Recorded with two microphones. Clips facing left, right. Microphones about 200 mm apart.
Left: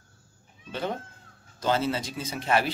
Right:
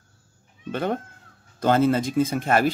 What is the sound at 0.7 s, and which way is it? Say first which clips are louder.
Speech: right 6 dB; 55° right (ahead or behind).